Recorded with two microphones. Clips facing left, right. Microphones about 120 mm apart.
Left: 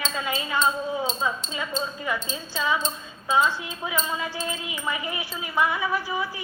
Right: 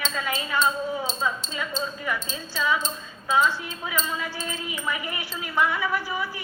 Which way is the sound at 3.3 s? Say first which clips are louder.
Even; 20° left (ahead or behind).